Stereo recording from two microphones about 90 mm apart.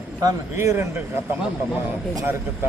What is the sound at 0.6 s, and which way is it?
Speech, 25° right (ahead or behind).